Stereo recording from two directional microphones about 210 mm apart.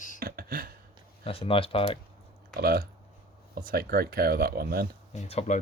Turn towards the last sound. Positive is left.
turn(degrees=30)  # may be behind; listen again after turning